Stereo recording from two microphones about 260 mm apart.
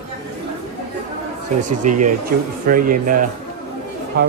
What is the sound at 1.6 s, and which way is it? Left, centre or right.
Speech, right.